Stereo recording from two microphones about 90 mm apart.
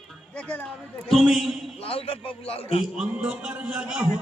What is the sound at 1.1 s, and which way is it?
Speech, centre (ahead or behind).